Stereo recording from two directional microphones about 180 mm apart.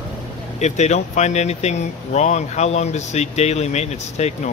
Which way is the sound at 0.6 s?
40° left (ahead or behind).